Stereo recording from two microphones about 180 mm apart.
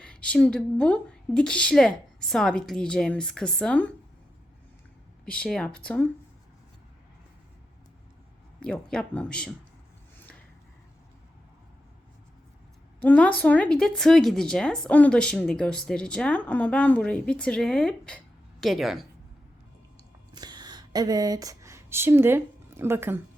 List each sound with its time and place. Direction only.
0.0 s speech: 5° left (ahead or behind)
5.2 s speech: 5° left (ahead or behind)
8.6 s speech: 5° left (ahead or behind)
13.0 s speech: 10° left (ahead or behind)
20.3 s a sound: 25° right (ahead or behind)
22.8 s speech: 10° right (ahead or behind)